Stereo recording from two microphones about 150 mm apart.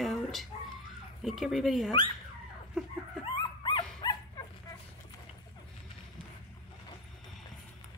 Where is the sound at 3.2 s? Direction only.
30° left (ahead or behind).